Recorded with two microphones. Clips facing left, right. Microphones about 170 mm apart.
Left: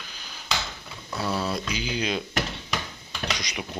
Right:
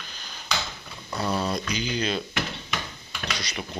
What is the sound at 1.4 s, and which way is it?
Speech, 5° left (ahead or behind).